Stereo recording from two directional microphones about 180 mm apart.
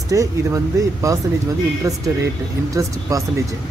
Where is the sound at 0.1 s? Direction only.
20° right (ahead or behind).